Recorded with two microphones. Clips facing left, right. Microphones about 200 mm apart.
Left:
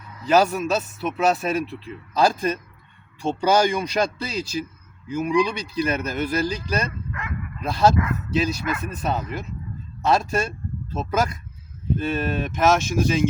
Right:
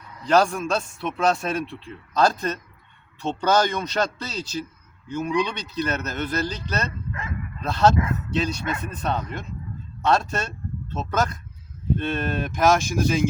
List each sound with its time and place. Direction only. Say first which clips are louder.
0.2 s a man's voice: left 1 dB; 5° left (ahead or behind)
7.9 s speech: left 1 dB; 25° right (ahead or behind)
8.3 s a man's voice: left 2 dB; 5° left (ahead or behind)